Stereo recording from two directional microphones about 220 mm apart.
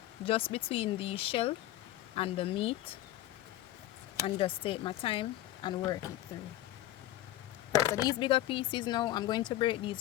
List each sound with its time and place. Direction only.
0.3 s speech: 25° left (ahead or behind)
4.4 s speech: 25° left (ahead or behind)
7.9 s speech: 20° left (ahead or behind)